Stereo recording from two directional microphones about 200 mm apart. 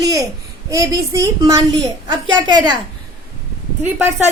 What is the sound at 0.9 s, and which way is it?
Speech, 15° right (ahead or behind).